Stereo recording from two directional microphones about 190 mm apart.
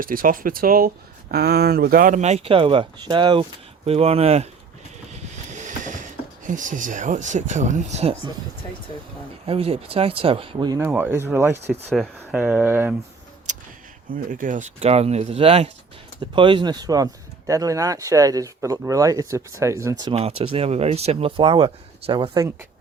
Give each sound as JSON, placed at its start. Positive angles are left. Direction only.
{"t": 0.0, "sound": "speech", "side_deg": -45}
{"t": 5.5, "sound": "speech", "side_deg": -40}
{"t": 9.5, "sound": "speech", "side_deg": -30}
{"t": 10.8, "sound": "speech", "side_deg": -10}
{"t": 11.9, "sound": "speech", "side_deg": 0}
{"t": 12.4, "sound": "speech", "side_deg": -10}
{"t": 13.5, "sound": "a sound", "side_deg": -40}
{"t": 14.3, "sound": "speech", "side_deg": -45}
{"t": 20.1, "sound": "speech", "side_deg": -30}